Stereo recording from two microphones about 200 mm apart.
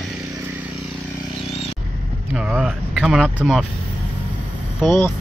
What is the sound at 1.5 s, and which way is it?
Vehicle, 30° left (ahead or behind).